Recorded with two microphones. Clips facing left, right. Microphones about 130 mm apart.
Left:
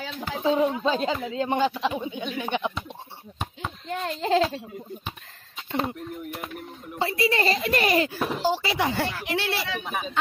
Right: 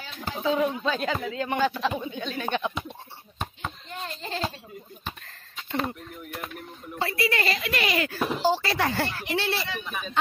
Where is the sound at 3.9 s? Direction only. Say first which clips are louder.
Left 14 dB; 85° left.